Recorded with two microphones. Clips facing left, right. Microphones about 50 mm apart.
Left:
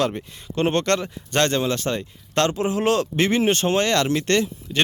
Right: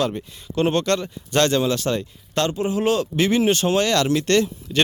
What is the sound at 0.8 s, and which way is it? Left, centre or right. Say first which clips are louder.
Speech: even; left.